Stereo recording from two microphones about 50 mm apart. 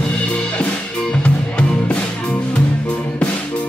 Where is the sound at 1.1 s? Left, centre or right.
Centre.